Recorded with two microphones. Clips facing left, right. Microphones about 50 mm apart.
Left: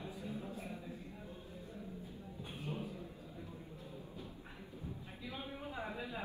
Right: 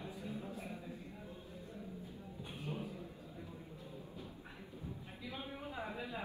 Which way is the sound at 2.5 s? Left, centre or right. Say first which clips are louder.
Even; left.